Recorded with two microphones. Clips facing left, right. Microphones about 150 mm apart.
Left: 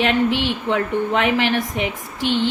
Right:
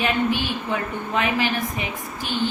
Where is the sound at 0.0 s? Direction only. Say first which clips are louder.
Left 4 dB; 80° left.